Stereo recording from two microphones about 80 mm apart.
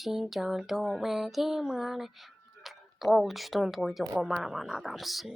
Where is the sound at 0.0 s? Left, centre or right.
Centre.